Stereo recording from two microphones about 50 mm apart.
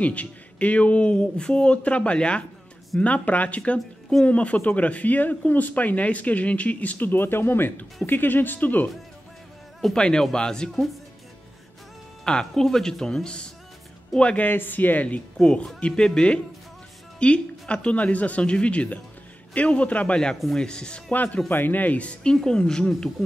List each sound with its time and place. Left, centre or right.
0.0 s speech: left
9.9 s speech: centre
12.3 s speech: centre
14.4 s speech: left
16.0 s speech: centre
21.1 s speech: left; by 23.0 s centre